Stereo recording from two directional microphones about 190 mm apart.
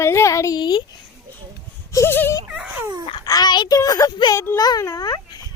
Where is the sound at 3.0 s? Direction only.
25° left (ahead or behind).